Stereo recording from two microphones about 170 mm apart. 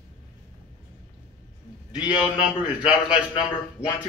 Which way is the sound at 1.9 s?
5° right (ahead or behind).